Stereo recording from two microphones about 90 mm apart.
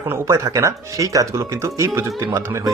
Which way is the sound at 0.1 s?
30° right (ahead or behind).